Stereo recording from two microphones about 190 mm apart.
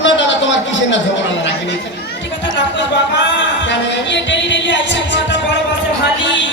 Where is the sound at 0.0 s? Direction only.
75° left (ahead or behind).